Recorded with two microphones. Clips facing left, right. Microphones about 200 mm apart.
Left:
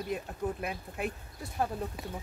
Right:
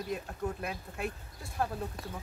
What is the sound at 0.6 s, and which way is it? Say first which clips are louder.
Speech: left 2 dB; 20° left (ahead or behind).